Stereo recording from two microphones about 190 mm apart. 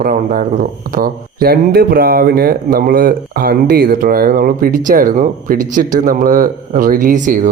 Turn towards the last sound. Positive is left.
turn(degrees=-40)  # may be behind; listen again after turning